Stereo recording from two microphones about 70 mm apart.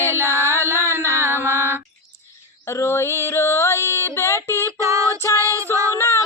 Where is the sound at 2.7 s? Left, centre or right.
Left.